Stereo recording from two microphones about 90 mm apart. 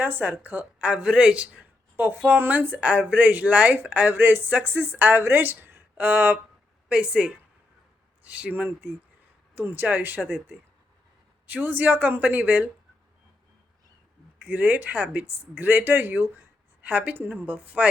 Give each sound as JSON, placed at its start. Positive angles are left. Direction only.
{"t": 0.0, "sound": "a woman's voice", "side_deg": -20}
{"t": 11.4, "sound": "speech", "side_deg": -20}
{"t": 14.4, "sound": "a woman's voice", "side_deg": -20}